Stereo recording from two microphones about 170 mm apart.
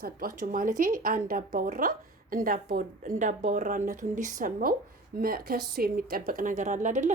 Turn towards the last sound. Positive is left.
turn(degrees=-45)  # may be behind; listen again after turning